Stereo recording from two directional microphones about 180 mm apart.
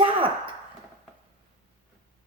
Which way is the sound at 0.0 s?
30° right (ahead or behind).